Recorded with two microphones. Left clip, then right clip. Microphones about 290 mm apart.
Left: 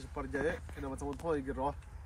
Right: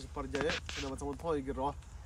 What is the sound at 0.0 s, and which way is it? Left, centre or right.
Speech, centre.